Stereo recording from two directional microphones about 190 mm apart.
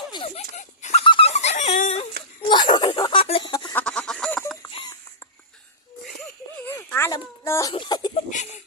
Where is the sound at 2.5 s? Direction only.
25° left (ahead or behind).